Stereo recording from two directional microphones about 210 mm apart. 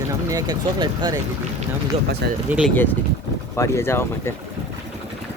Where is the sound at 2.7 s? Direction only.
10° left (ahead or behind).